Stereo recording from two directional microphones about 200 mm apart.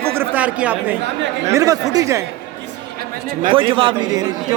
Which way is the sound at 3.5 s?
25° right (ahead or behind).